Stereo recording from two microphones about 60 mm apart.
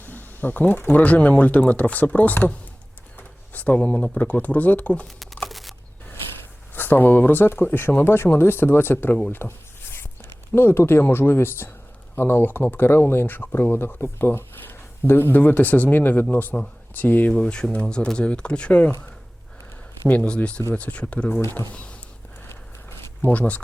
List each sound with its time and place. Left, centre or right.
0.0 s speech: left
3.2 s a sound: left
4.2 s speech: left
5.0 s crumpling: centre
6.7 s speech: left
9.3 s a sound: left
11.0 s speech: left
17.3 s speech: centre
20.1 s speech: left
22.4 s a sound: left
23.3 s speech: left